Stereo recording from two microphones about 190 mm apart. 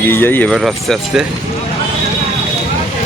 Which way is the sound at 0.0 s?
10° left (ahead or behind).